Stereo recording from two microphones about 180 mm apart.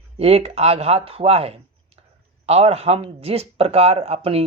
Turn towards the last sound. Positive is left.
turn(degrees=-35)  # may be behind; listen again after turning